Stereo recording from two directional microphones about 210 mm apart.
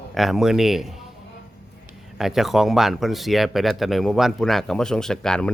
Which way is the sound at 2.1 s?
Centre (ahead or behind).